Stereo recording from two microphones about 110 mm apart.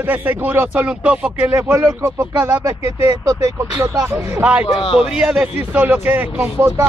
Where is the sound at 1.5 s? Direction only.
25° right (ahead or behind).